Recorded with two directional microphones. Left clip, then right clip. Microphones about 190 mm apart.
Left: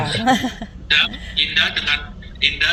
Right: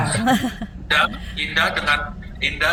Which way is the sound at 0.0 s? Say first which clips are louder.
Left 1 dB; centre (ahead or behind).